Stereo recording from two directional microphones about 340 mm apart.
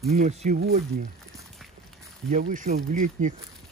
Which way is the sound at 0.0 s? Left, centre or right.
Right.